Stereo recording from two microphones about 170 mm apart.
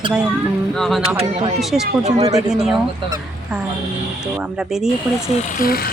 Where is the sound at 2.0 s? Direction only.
40° right (ahead or behind).